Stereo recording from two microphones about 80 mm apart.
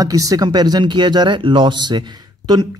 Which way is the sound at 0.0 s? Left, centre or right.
Right.